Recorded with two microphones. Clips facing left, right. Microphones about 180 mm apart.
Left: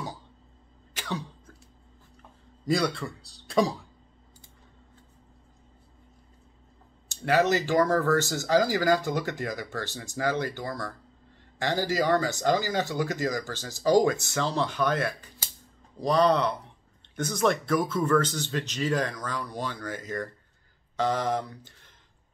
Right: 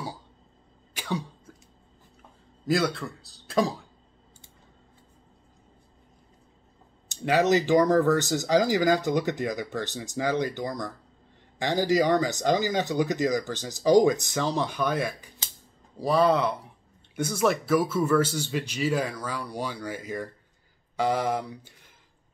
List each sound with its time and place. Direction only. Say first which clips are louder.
0.9 s throat clearing: right 3 dB; 10° right (ahead or behind)
2.6 s speech: right 1 dB; centre (ahead or behind)
7.1 s speech: right 1 dB; 15° right (ahead or behind)